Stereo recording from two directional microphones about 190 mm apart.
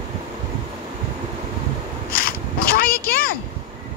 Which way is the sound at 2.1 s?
50° left (ahead or behind).